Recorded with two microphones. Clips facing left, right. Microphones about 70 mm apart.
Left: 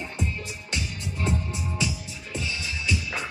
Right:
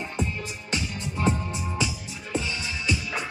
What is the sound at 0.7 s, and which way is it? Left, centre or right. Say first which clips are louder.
Music: right 3 dB; right.